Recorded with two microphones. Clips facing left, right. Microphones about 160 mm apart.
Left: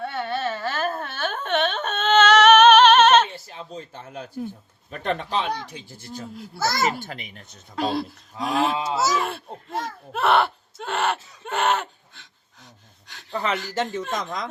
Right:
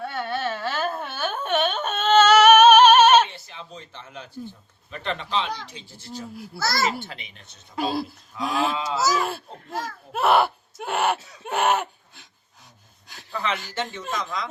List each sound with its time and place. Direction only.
0.0 s carnatic music: centre (ahead or behind)
3.3 s a sound: 40° left (ahead or behind)
4.9 s speech: 50° left (ahead or behind)
7.8 s speech: 5° right (ahead or behind)
8.7 s speech: 30° left (ahead or behind)
9.1 s speech: centre (ahead or behind)
11.4 s a sound: 5° right (ahead or behind)
13.3 s speech: 45° left (ahead or behind)